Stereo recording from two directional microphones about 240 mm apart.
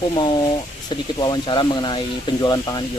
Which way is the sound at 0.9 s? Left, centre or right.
Centre.